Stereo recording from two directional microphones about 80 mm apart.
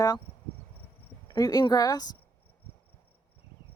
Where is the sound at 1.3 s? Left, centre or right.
Left.